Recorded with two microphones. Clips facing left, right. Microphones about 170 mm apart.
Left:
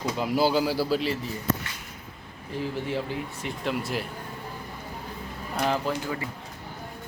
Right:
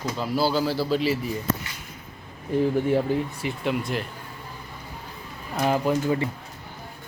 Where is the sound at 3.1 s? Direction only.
45° right (ahead or behind).